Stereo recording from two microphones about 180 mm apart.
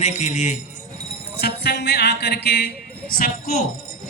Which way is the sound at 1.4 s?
65° left (ahead or behind).